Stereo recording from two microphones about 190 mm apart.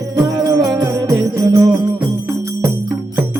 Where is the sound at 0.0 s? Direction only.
20° right (ahead or behind).